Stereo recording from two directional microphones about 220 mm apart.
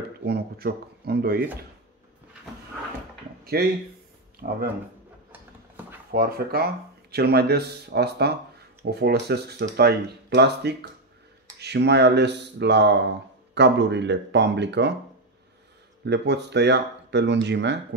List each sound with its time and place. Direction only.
0.2 s speech: 45° right (ahead or behind)
3.6 s speech: 45° right (ahead or behind)
5.3 s a sound: 10° right (ahead or behind)
6.1 s speech: 45° right (ahead or behind)
16.1 s speech: 50° right (ahead or behind)